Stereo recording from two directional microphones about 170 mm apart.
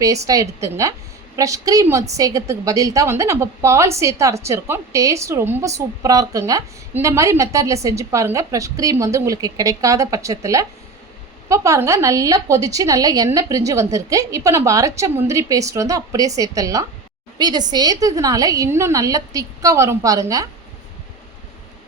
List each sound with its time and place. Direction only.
0.0 s a woman's voice: 20° right (ahead or behind)